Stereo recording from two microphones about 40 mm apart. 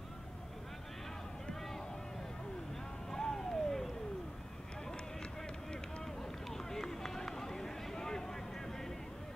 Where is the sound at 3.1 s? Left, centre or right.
Centre.